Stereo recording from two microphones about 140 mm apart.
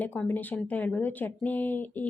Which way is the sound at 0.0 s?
10° left (ahead or behind).